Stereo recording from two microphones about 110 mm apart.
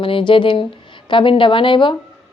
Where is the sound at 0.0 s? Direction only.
50° left (ahead or behind).